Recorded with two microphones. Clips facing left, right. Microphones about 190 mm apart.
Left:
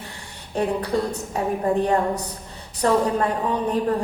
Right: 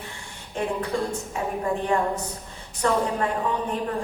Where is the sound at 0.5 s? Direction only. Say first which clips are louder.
Left 4 dB; 35° left (ahead or behind).